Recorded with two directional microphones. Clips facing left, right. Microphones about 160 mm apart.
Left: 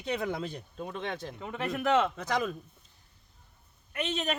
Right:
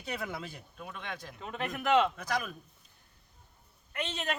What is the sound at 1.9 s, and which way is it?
Speech, 15° right (ahead or behind).